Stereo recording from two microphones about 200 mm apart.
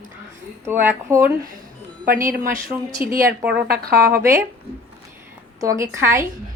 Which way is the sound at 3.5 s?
50° right (ahead or behind).